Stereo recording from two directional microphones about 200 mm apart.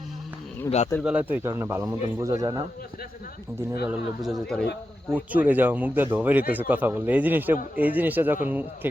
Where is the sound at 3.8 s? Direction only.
5° right (ahead or behind).